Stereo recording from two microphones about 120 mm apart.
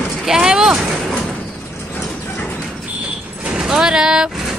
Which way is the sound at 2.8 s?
10° right (ahead or behind).